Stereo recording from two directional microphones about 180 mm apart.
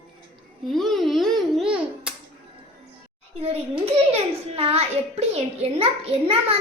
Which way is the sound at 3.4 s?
35° right (ahead or behind).